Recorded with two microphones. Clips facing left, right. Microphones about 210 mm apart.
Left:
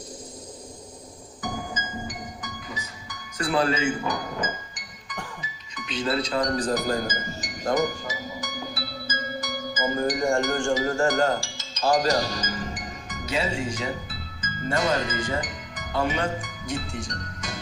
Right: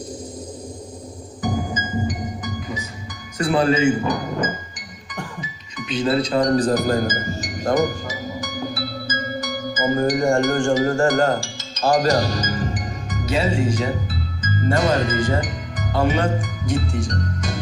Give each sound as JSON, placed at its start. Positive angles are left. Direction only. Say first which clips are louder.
{"t": 1.4, "sound": "music", "louder": "right 8 dB", "side_deg": -20}
{"t": 3.3, "sound": "speech", "louder": "right 6 dB", "side_deg": -20}
{"t": 6.0, "sound": "speech", "louder": "right 6 dB", "side_deg": -25}
{"t": 6.5, "sound": "speech", "louder": "right 7 dB", "side_deg": -40}
{"t": 8.4, "sound": "music", "louder": "right 7 dB", "side_deg": -55}
{"t": 12.5, "sound": "music", "louder": "right 7 dB", "side_deg": -40}
{"t": 16.0, "sound": "speech", "louder": "right 8 dB", "side_deg": -45}
{"t": 16.7, "sound": "music", "louder": "right 8 dB", "side_deg": -40}